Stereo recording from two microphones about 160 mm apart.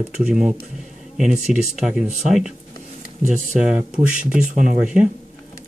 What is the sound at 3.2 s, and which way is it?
Speech, 50° right (ahead or behind).